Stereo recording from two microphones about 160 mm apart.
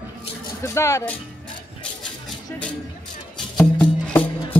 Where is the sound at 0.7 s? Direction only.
20° left (ahead or behind).